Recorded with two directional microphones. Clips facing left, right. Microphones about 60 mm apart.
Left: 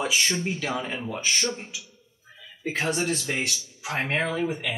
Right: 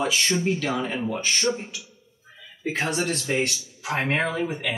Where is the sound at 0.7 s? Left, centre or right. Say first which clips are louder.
Right 3 dB; centre.